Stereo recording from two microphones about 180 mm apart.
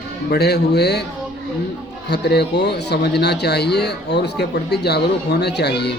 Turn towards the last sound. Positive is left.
turn(degrees=65)  # may be behind; listen again after turning